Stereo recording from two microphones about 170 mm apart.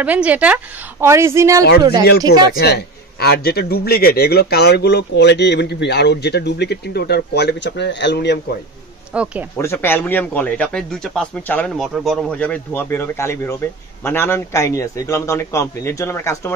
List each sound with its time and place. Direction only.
0.0 s speech: 10° right (ahead or behind)
2.0 s a man's voice: 75° left (ahead or behind)
9.1 s speech: 5° right (ahead or behind)
9.6 s a man's voice: 15° left (ahead or behind)